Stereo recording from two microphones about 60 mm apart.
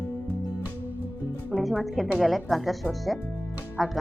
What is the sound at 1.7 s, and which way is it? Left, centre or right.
Speech, centre.